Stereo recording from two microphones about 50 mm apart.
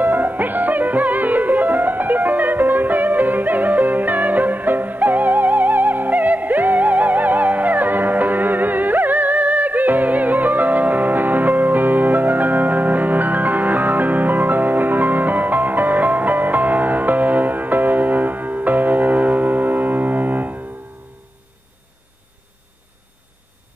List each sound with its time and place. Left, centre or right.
0.0 s music: right